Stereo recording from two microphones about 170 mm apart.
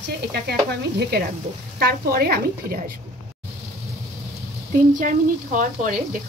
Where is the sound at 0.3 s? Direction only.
75° right (ahead or behind).